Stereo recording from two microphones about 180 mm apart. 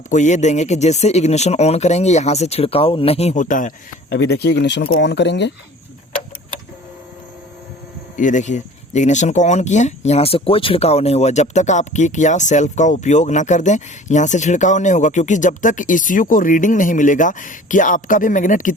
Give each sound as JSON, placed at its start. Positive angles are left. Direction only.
{"t": 0.1, "sound": "speech", "side_deg": 40}
{"t": 4.1, "sound": "speech", "side_deg": 65}
{"t": 8.1, "sound": "speech", "side_deg": 45}